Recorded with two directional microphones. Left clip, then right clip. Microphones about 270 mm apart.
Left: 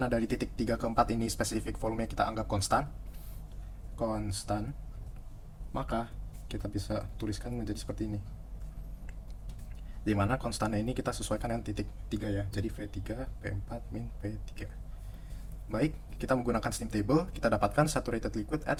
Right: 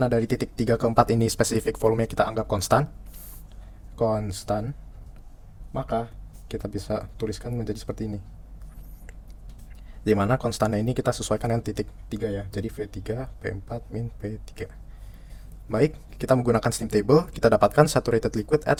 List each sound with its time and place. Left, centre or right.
0.0 s speech: right
4.5 s speech: right
5.7 s speech: right
10.0 s speech: right
15.7 s speech: right